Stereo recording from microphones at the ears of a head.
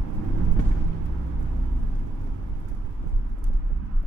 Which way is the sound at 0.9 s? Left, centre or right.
Right.